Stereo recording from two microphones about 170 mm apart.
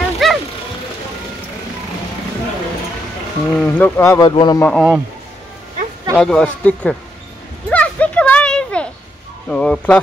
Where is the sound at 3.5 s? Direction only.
10° left (ahead or behind).